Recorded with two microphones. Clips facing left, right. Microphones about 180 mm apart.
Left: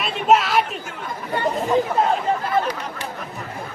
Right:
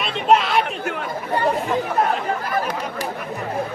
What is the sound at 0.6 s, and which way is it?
Chatter, 65° right (ahead or behind).